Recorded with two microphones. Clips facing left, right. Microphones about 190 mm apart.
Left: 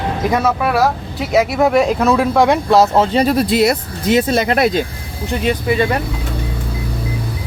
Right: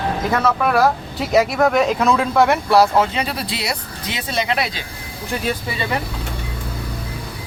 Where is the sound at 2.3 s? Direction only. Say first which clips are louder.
Left 1 dB; 15° left (ahead or behind); by 4.8 s 50° left (ahead or behind).